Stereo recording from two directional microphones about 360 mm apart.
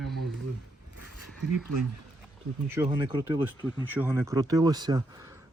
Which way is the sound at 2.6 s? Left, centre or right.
Centre.